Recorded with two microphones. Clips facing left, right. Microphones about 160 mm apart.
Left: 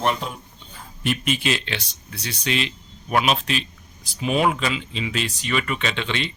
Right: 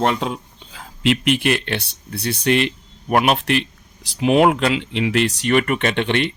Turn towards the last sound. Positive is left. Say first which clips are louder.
# right 7 dB
turn(degrees=-60)  # may be behind; listen again after turning